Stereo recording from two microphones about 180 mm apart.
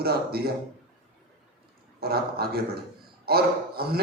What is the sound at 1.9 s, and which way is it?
A man's voice, 60° right (ahead or behind).